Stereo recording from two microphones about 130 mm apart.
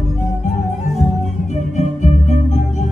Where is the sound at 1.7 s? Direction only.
65° left (ahead or behind).